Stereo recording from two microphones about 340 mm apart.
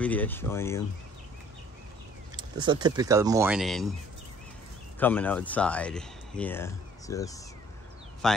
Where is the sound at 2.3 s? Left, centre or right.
Centre.